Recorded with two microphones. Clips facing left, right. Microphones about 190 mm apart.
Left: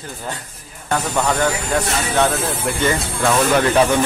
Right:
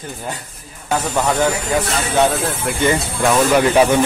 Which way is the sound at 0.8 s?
5° right (ahead or behind).